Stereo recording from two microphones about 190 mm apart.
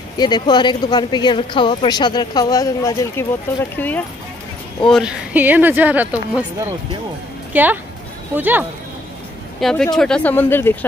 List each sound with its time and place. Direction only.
0.2 s speech: 25° left (ahead or behind)
4.8 s speech: centre (ahead or behind)
9.6 s speech: centre (ahead or behind)